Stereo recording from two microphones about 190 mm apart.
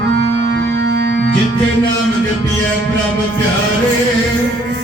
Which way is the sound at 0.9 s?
60° right (ahead or behind).